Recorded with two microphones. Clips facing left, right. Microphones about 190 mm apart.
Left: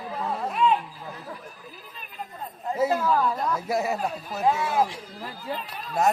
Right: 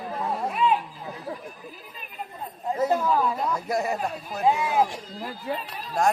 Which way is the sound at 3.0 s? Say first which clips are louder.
Even; 10° right (ahead or behind).